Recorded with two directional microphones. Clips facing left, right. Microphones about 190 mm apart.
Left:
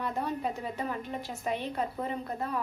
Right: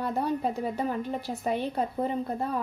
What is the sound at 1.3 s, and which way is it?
Speech, 35° right (ahead or behind).